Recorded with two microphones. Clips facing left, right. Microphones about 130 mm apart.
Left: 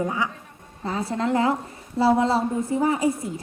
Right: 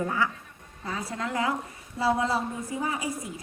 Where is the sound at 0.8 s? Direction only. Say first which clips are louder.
Left 7 dB; 30° left (ahead or behind).